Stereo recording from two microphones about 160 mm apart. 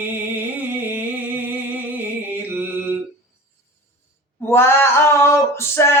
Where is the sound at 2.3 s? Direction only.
10° right (ahead or behind).